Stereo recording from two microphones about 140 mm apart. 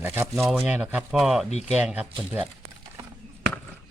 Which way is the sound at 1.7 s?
10° right (ahead or behind).